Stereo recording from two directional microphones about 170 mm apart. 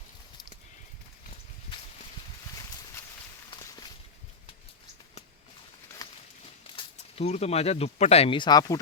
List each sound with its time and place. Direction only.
3.5 s walk: 25° left (ahead or behind)
6.7 s speech: 40° left (ahead or behind); by 8.8 s 25° left (ahead or behind)